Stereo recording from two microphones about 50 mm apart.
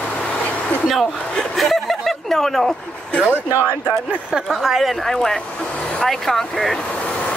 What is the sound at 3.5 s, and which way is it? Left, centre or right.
Speech, right.